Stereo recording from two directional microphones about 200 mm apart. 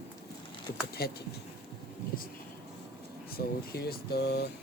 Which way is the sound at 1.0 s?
50° left (ahead or behind).